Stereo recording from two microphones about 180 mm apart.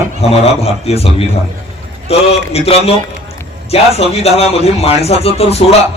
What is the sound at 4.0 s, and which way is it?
A man's voice, 35° left (ahead or behind).